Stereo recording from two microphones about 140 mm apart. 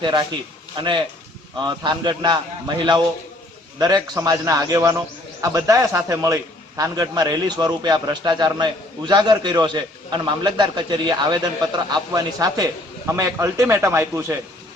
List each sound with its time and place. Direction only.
0.0 s a man's voice: 30° right (ahead or behind)